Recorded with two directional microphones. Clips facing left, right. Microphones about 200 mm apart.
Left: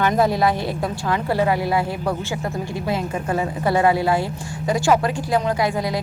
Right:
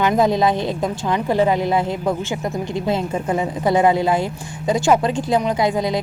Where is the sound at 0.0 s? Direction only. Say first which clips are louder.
Right 2 dB; 20° right (ahead or behind).